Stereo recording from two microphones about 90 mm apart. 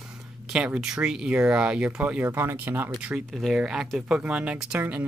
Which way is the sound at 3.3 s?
Centre (ahead or behind).